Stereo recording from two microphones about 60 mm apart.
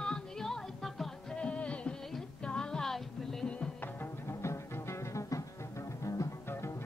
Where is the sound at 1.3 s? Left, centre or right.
Centre.